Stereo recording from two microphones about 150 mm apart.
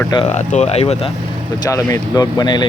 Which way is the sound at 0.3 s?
50° left (ahead or behind).